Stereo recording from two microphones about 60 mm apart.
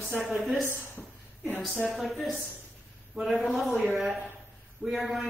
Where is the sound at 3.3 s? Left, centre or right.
Centre.